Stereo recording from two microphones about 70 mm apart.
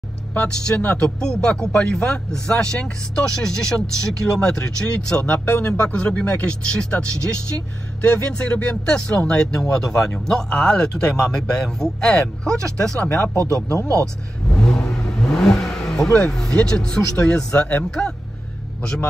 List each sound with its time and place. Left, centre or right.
0.3 s speech: centre
13.4 s speech: right
14.5 s speech: centre